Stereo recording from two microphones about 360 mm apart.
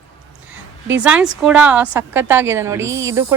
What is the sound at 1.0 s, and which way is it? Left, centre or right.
A woman's voice, centre.